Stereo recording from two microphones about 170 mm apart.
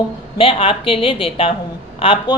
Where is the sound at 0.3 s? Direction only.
30° left (ahead or behind).